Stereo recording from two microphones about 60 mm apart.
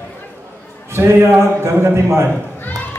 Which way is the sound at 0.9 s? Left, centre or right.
Right.